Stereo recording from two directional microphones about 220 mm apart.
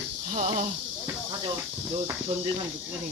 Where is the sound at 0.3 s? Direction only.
35° right (ahead or behind).